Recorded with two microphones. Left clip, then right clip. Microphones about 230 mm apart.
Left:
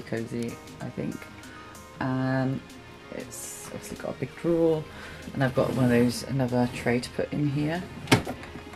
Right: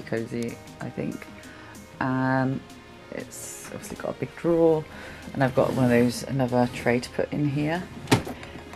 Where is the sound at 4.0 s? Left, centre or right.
Centre.